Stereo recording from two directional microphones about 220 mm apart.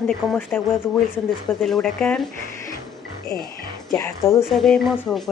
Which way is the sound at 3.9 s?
15° left (ahead or behind).